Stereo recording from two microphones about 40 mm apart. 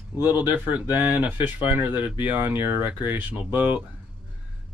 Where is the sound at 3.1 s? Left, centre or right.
Right.